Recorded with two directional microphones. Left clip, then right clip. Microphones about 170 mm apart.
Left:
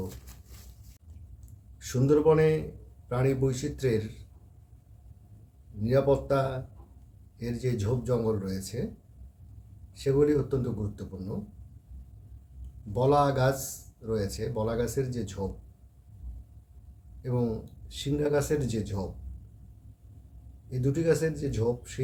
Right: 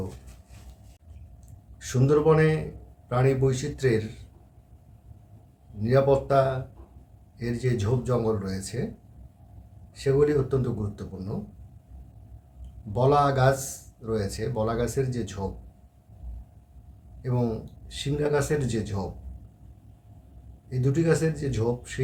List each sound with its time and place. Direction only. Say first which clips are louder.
1.8 s speech: right 1 dB; 10° right (ahead or behind)
5.8 s speech: right 3 dB; 10° right (ahead or behind)
9.9 s speech: right 2 dB; 10° right (ahead or behind)
12.9 s speech: right 2 dB; 10° right (ahead or behind)
17.2 s speech: right 2 dB; 10° right (ahead or behind)
20.7 s speech: right 2 dB; 10° right (ahead or behind)